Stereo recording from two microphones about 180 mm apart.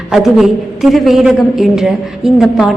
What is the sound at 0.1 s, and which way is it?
A woman's voice, centre (ahead or behind).